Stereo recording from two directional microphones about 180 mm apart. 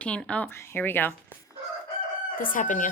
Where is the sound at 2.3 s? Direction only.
50° left (ahead or behind).